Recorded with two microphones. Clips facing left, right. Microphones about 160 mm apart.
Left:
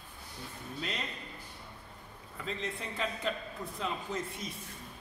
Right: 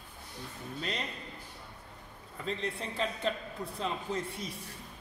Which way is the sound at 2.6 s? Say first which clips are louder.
Right 1 dB; 30° right (ahead or behind).